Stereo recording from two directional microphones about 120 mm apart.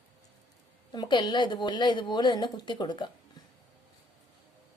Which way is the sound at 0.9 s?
35° left (ahead or behind).